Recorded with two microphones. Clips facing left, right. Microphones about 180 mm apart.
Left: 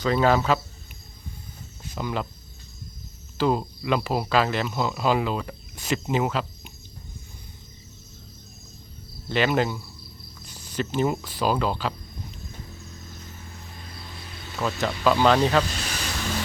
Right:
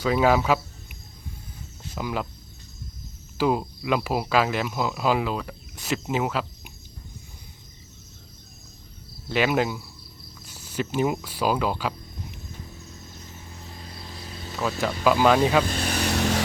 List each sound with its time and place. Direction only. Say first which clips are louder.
0.0 s speech: even; 10° right (ahead or behind)
2.0 s speech: even; 5° right (ahead or behind)
3.3 s speech: even; 10° right (ahead or behind)
9.3 s speech: even; 10° right (ahead or behind)
10.4 s cricket: even; 10° right (ahead or behind)
14.5 s speech: even; 5° right (ahead or behind)
15.6 s vehicle: right 6 dB; 55° right (ahead or behind)